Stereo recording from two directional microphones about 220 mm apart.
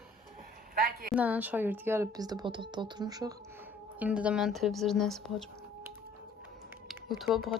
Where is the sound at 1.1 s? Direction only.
5° right (ahead or behind).